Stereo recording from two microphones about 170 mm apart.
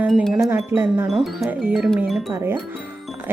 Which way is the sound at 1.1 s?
Centre (ahead or behind).